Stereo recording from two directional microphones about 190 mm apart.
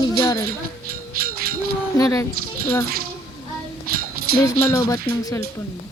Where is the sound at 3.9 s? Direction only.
50° right (ahead or behind).